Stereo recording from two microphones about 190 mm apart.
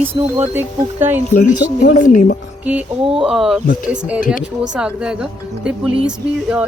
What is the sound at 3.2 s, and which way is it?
Speech, centre (ahead or behind).